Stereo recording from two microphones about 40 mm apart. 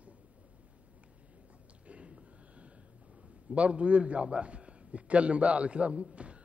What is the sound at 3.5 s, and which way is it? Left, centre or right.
A man's voice, right.